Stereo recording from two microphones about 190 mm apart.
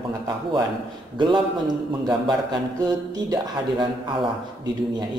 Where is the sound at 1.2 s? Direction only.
25° right (ahead or behind).